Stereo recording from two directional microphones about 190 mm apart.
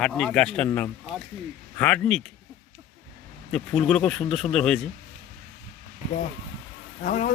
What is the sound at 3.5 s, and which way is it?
Speech, 5° left (ahead or behind).